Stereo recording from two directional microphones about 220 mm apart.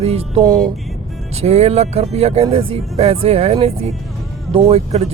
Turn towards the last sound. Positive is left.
turn(degrees=-30)  # may be behind; listen again after turning